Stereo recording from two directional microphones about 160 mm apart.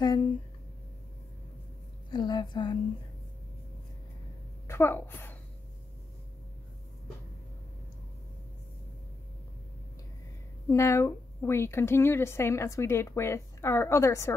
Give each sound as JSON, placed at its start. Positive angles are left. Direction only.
{"t": 0.0, "sound": "speech", "side_deg": 25}
{"t": 2.1, "sound": "a woman's voice", "side_deg": 25}
{"t": 4.6, "sound": "a woman's voice", "side_deg": 15}
{"t": 10.7, "sound": "a woman's voice", "side_deg": 15}